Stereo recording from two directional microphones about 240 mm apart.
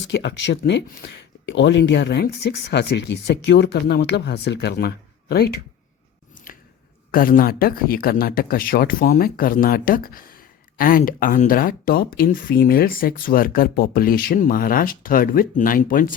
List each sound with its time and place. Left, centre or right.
0.1 s speech: left
6.5 s chewing: left
7.1 s speech: left